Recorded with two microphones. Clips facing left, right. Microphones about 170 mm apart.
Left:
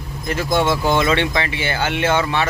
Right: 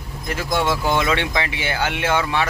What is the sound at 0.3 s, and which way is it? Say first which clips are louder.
Speech: left 3 dB; 5° right (ahead or behind).